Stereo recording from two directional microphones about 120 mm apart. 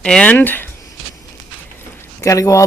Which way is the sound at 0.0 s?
10° left (ahead or behind).